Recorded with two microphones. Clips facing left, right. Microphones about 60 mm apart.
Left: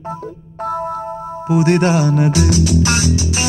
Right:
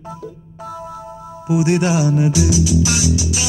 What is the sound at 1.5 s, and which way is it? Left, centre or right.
Music, left.